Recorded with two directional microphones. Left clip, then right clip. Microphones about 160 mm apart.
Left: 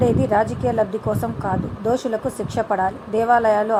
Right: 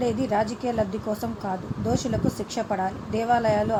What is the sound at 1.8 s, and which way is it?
A woman's voice, 15° left (ahead or behind).